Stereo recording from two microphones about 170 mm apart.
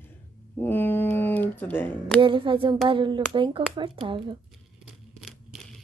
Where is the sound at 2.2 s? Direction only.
30° right (ahead or behind).